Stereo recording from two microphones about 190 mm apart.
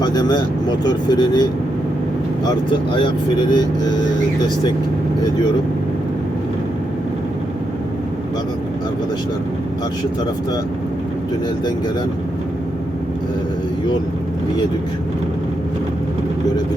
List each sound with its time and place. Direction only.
0.0 s speech: 20° left (ahead or behind)
2.6 s speech: 25° left (ahead or behind)